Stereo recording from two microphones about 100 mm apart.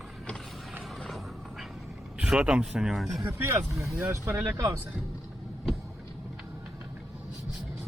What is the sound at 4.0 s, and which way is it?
Speech, 20° right (ahead or behind).